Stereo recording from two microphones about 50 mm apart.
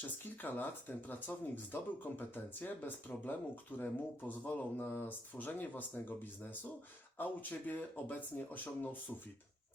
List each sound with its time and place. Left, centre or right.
0.4 s speech: left